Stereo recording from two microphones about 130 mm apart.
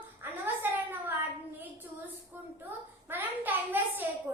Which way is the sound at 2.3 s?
15° right (ahead or behind).